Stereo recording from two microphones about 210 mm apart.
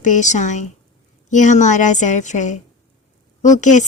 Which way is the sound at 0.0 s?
35° left (ahead or behind).